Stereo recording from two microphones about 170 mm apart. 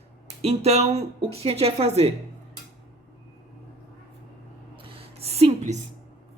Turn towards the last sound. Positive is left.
turn(degrees=-40)  # may be behind; listen again after turning